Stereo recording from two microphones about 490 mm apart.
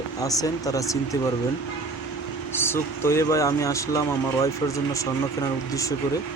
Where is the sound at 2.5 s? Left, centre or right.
Centre.